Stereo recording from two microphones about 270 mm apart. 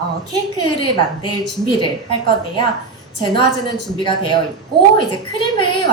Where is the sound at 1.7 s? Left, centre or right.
Centre.